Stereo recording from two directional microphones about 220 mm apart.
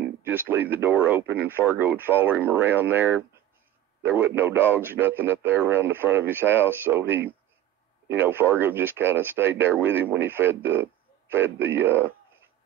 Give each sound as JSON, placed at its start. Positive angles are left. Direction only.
{"t": 0.2, "sound": "a man's voice", "side_deg": -10}